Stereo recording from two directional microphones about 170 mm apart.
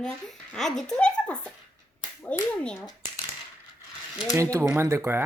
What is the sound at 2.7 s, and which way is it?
Speech, 25° left (ahead or behind).